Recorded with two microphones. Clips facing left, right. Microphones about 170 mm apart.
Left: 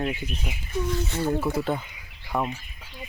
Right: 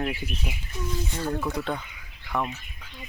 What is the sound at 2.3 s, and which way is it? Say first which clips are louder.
Speech: left 2 dB; 25° left (ahead or behind).